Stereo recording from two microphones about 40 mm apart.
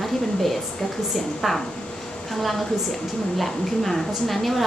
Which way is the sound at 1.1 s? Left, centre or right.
Centre.